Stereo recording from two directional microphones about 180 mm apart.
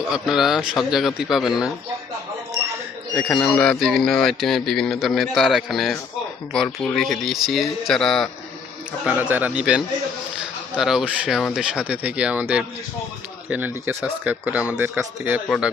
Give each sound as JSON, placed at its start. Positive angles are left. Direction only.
{"t": 0.0, "sound": "a man's voice", "side_deg": 0}
{"t": 3.4, "sound": "a man's voice", "side_deg": 5}
{"t": 9.0, "sound": "a man's voice", "side_deg": -10}
{"t": 15.4, "sound": "a man's voice", "side_deg": 0}